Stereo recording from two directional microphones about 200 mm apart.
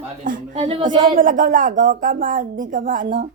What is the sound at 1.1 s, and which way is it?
Speech, 40° right (ahead or behind).